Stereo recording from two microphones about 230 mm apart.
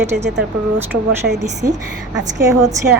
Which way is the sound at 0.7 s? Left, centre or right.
Centre.